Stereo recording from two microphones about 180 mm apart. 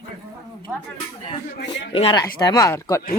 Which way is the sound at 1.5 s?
75° left (ahead or behind).